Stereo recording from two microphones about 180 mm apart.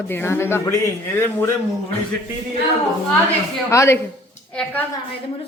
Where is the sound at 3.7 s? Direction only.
15° left (ahead or behind).